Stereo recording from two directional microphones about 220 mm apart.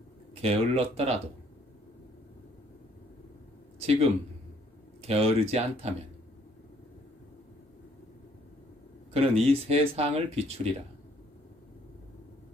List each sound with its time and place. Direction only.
0.4 s speech: 25° right (ahead or behind)
3.8 s speech: 25° right (ahead or behind)
9.1 s speech: 25° right (ahead or behind)